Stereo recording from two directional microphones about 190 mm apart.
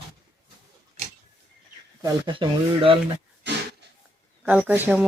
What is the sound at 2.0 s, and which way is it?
Speech, 25° right (ahead or behind).